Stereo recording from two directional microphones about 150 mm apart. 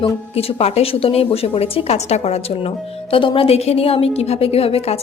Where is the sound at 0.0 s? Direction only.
40° left (ahead or behind).